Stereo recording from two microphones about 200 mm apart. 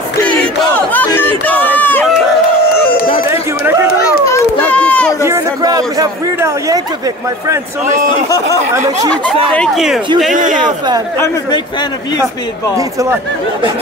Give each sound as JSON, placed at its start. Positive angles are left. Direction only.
{"t": 0.7, "sound": "chatter", "side_deg": 10}
{"t": 3.3, "sound": "run", "side_deg": -15}
{"t": 4.0, "sound": "children playing", "side_deg": 10}
{"t": 5.2, "sound": "a man's voice", "side_deg": -15}
{"t": 9.1, "sound": "speech", "side_deg": 5}
{"t": 10.3, "sound": "speech", "side_deg": -40}
{"t": 12.7, "sound": "speech", "side_deg": -15}